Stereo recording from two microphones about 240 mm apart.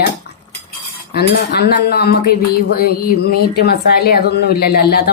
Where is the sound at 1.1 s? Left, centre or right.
Left.